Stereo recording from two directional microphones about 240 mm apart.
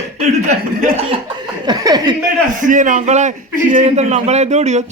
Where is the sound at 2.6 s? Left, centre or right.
Right.